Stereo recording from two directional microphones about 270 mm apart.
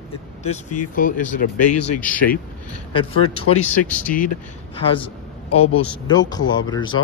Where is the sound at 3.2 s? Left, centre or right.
Left.